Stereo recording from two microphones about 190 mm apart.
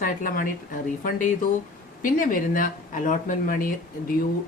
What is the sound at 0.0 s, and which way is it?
Speech, 45° left (ahead or behind).